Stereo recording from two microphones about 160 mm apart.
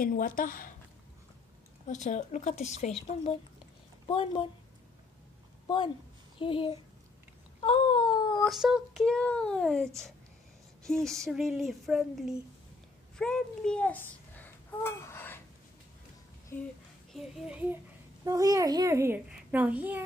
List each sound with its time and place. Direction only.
0.0 s a woman's voice: 60° left (ahead or behind)
1.9 s a woman's voice: 50° left (ahead or behind)
6.4 s speech: 35° left (ahead or behind)
7.6 s a sound: 30° left (ahead or behind)
8.5 s a child's voice: centre (ahead or behind); by 15.4 s 15° left (ahead or behind)
17.1 s speech: centre (ahead or behind)
18.2 s a child's voice: 20° right (ahead or behind)